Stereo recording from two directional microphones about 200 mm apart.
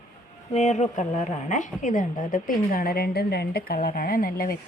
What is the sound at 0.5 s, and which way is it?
A woman's voice, 35° left (ahead or behind).